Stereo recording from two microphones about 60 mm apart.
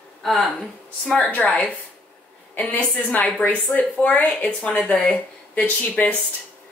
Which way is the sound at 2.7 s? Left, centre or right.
Left.